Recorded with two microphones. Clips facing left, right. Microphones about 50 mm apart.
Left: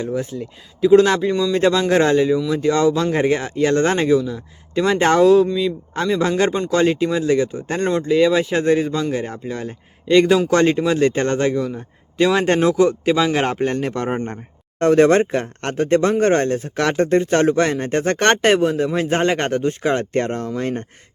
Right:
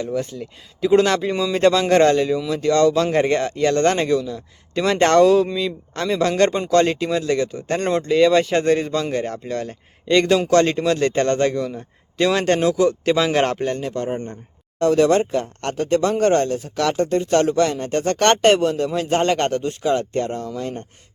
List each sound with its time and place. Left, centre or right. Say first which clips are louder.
0.0 s speech: left 1 dB; centre
0.3 s speech: left 3 dB; centre
1.3 s speech: even; centre
7.9 s a man's voice: even; centre
12.6 s speech: left 2 dB; left
13.1 s speech: even; centre
13.6 s speech: left 3 dB; left